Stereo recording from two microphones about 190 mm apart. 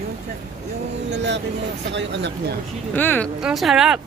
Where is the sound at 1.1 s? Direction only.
65° right (ahead or behind).